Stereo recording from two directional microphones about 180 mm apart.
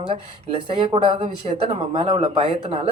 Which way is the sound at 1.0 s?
30° right (ahead or behind).